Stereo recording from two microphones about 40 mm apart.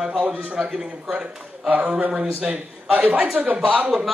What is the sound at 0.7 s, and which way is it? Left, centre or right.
A man's voice, centre.